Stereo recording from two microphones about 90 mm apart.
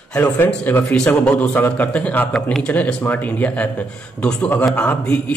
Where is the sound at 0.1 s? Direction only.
20° left (ahead or behind).